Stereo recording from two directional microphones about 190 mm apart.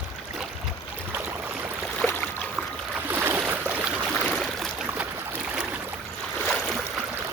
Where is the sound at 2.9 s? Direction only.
10° right (ahead or behind).